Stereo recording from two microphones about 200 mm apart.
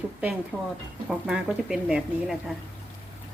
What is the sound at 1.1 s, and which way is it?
Speech, 5° right (ahead or behind).